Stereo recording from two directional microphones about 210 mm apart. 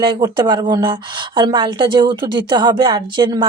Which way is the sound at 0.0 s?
20° right (ahead or behind).